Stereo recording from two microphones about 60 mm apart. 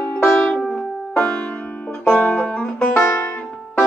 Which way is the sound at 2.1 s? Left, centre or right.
Left.